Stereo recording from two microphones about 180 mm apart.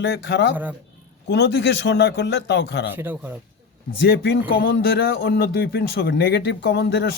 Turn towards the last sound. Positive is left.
turn(degrees=70)  # may be behind; listen again after turning